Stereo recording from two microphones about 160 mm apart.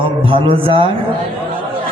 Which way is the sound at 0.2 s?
35° right (ahead or behind).